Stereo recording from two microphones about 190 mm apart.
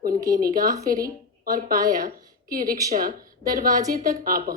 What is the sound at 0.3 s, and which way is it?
A woman's voice, 45° right (ahead or behind).